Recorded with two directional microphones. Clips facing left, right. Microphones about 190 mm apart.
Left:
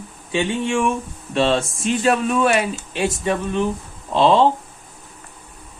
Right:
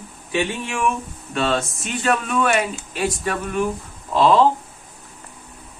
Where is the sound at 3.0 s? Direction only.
25° left (ahead or behind).